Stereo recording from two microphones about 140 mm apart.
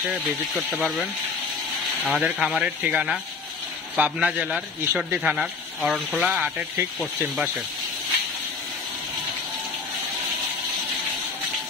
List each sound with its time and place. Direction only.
2.0 s a man's voice: centre (ahead or behind)
6.1 s a man's voice: 10° right (ahead or behind)